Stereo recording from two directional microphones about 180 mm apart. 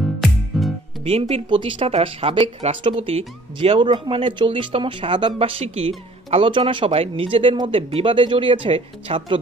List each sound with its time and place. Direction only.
0.0 s music: centre (ahead or behind)
1.3 s speech: 30° right (ahead or behind)